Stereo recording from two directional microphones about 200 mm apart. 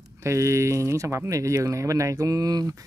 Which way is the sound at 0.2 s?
15° right (ahead or behind).